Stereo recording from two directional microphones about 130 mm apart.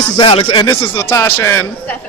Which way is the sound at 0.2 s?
40° left (ahead or behind).